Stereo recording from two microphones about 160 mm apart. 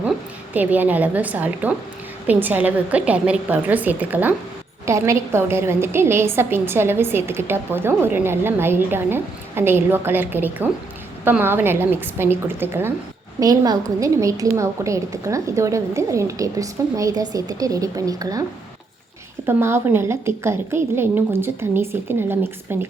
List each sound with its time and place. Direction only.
0.5 s a woman's voice: 10° right (ahead or behind)
19.5 s a woman's voice: 15° right (ahead or behind)